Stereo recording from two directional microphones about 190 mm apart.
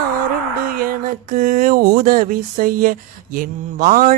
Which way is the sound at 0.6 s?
50° right (ahead or behind).